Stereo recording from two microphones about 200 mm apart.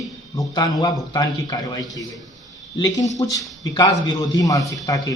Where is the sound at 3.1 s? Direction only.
15° left (ahead or behind).